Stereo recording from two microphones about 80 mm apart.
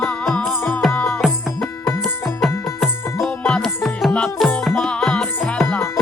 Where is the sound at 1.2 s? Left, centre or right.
Centre.